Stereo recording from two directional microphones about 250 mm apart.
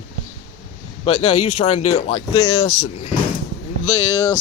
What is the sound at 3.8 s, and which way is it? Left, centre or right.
Speech, left.